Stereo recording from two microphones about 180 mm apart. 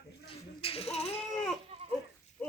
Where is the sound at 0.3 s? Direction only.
30° left (ahead or behind).